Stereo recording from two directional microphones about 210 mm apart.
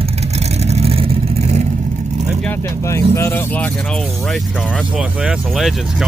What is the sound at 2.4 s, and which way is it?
Vehicle, 10° left (ahead or behind).